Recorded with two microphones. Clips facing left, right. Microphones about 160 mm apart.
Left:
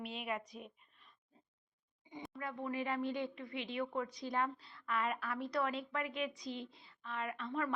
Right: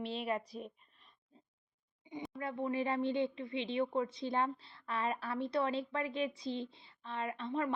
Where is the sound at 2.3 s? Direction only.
30° right (ahead or behind).